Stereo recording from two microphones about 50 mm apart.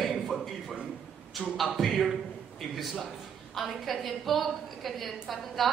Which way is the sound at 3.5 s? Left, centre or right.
Centre.